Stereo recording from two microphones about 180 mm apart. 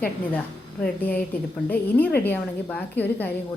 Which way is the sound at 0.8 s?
10° left (ahead or behind).